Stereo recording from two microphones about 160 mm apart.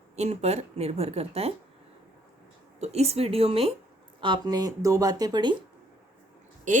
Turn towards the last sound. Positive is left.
turn(degrees=-55)  # may be behind; listen again after turning